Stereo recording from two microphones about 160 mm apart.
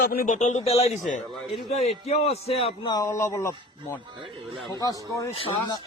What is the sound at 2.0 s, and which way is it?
Speech, 40° left (ahead or behind).